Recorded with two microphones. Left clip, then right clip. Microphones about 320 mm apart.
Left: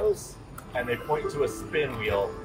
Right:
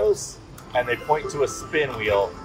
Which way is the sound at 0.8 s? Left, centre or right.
Right.